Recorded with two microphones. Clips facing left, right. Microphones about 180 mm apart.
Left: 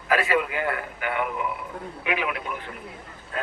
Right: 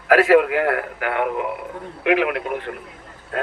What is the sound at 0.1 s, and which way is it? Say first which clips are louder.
A man's voice: right 9 dB; 90° right.